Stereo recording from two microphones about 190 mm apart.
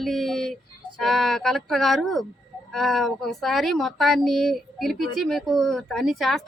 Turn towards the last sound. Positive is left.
turn(degrees=0)  # may be behind; listen again after turning